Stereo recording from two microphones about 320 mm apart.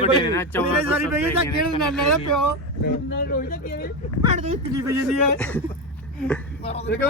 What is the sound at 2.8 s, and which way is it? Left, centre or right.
Speech, left.